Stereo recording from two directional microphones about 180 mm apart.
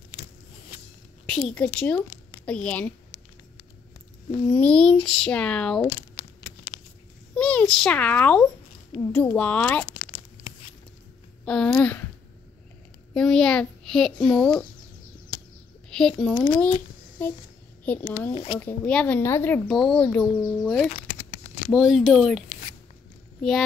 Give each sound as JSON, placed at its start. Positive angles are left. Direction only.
{"t": 1.3, "sound": "a woman's voice", "side_deg": 5}
{"t": 4.5, "sound": "speech", "side_deg": 5}
{"t": 7.3, "sound": "a child's voice", "side_deg": 5}
{"t": 11.4, "sound": "speech", "side_deg": 5}
{"t": 13.1, "sound": "speech", "side_deg": 5}
{"t": 15.9, "sound": "speech", "side_deg": 5}
{"t": 18.3, "sound": "a child's voice", "side_deg": 30}
{"t": 18.6, "sound": "speech", "side_deg": 10}